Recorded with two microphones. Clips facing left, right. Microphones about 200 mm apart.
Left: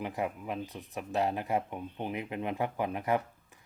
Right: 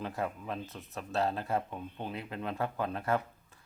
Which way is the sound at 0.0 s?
15° left (ahead or behind).